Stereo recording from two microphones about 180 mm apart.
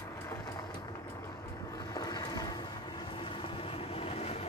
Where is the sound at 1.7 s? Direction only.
20° left (ahead or behind).